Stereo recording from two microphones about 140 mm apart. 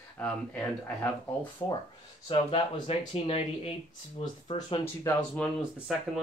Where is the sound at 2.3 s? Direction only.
40° left (ahead or behind).